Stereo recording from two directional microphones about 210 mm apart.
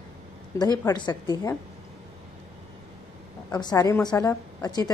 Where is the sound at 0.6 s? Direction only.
20° left (ahead or behind).